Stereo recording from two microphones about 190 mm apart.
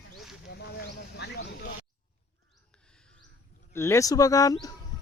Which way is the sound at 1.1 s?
60° left (ahead or behind).